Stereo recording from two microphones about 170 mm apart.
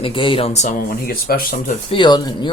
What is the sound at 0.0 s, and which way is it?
Speech, 30° left (ahead or behind).